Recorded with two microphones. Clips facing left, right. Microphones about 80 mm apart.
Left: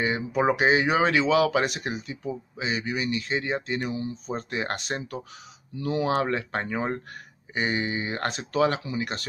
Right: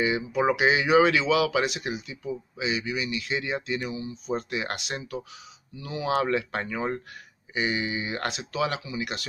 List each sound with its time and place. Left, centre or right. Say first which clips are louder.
0.0 s speech: even; left
6.0 s speech: right 4 dB; left